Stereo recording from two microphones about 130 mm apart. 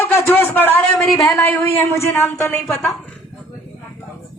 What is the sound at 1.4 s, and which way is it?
A man's voice, 15° left (ahead or behind).